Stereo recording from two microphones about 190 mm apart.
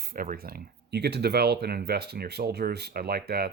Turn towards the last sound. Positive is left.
turn(degrees=-55)  # may be behind; listen again after turning